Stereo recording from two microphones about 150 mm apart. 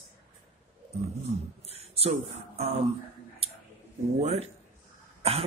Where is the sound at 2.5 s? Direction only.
40° right (ahead or behind).